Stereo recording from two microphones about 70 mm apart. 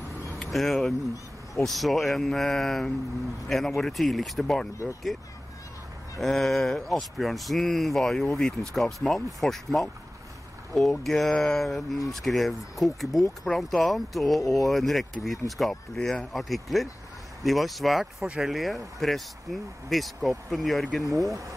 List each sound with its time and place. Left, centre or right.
0.4 s speech: centre
6.1 s speech: centre
18.2 s speech: centre
18.5 s speech: centre
21.0 s speech: right